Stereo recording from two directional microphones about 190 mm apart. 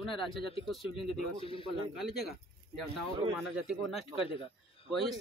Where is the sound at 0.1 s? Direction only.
25° left (ahead or behind).